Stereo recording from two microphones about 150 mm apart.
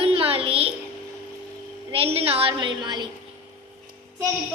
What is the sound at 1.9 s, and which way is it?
A woman's voice, 40° right (ahead or behind).